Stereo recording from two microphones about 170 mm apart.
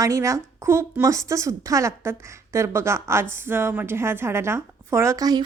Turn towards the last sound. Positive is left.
turn(degrees=-20)  # may be behind; listen again after turning